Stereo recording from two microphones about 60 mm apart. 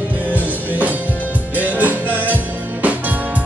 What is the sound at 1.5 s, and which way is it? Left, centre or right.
Music, right.